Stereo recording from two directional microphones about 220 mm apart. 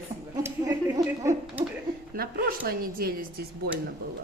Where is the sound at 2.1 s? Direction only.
40° right (ahead or behind).